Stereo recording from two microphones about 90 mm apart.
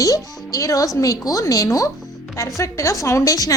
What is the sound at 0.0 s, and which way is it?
A woman's voice, 40° left (ahead or behind).